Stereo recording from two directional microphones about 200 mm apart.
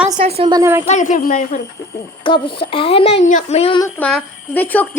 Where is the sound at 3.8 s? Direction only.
10° left (ahead or behind).